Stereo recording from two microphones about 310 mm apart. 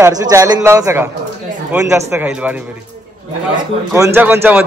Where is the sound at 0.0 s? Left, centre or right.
Centre.